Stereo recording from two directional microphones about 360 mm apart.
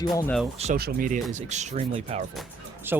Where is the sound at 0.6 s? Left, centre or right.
Right.